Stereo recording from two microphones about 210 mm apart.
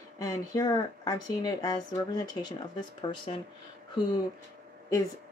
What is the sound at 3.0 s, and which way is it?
Speech, 25° left (ahead or behind).